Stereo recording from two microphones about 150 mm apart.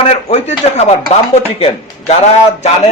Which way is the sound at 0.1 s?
45° left (ahead or behind).